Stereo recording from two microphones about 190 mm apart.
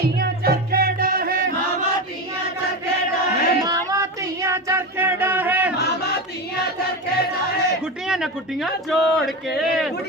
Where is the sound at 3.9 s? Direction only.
15° right (ahead or behind).